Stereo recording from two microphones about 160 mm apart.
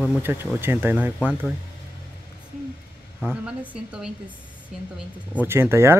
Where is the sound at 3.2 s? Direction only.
10° right (ahead or behind).